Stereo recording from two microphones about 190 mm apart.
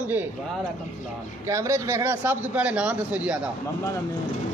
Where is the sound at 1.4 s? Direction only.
15° right (ahead or behind).